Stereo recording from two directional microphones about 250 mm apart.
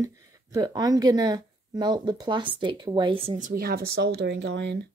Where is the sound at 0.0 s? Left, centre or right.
Centre; by 4.8 s right.